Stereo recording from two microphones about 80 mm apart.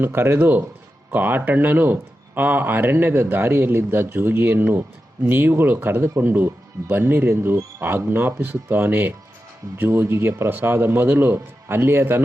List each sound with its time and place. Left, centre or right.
0.0 s speech: right